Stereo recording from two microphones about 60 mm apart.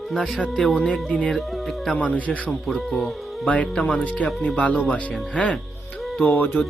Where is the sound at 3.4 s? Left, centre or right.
Left.